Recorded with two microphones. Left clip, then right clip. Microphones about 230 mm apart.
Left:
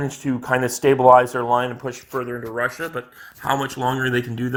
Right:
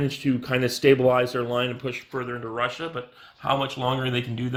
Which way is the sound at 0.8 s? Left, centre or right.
Left.